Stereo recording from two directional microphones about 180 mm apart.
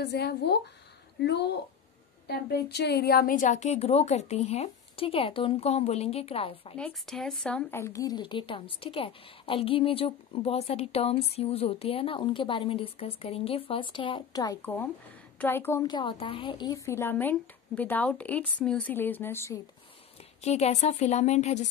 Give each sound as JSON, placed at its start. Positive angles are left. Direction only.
{"t": 0.0, "sound": "a woman's voice", "side_deg": 65}
{"t": 6.8, "sound": "a woman's voice", "side_deg": 0}
{"t": 14.6, "sound": "a woman's voice", "side_deg": 10}
{"t": 20.4, "sound": "a woman's voice", "side_deg": 40}